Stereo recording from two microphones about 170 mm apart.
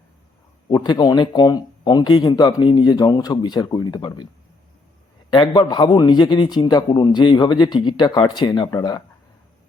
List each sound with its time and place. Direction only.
0.7 s a man's voice: 25° left (ahead or behind)
5.3 s a man's voice: 25° left (ahead or behind)